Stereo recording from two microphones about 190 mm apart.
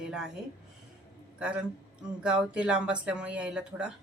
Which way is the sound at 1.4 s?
5° right (ahead or behind).